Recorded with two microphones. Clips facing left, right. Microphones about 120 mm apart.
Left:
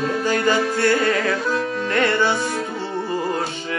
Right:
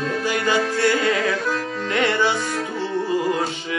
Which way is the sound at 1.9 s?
15° right (ahead or behind).